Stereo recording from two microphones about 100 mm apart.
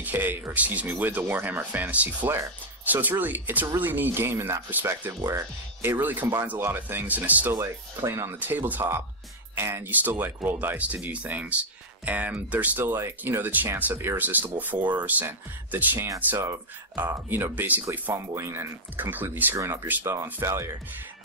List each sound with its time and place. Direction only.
0.0 s speech: 20° right (ahead or behind)
7.5 s speech: 30° right (ahead or behind)
8.4 s speech: 20° right (ahead or behind)
19.5 s speech: 30° right (ahead or behind)
19.9 s speech: 20° right (ahead or behind)
20.2 s speech: 30° right (ahead or behind)